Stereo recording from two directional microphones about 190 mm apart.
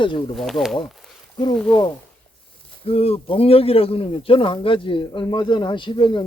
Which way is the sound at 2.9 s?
30° left (ahead or behind).